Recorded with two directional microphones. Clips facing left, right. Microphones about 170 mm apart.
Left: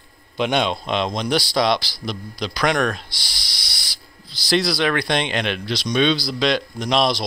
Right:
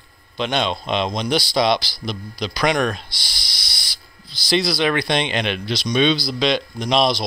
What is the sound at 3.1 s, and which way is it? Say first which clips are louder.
Speech: even; 35° left (ahead or behind).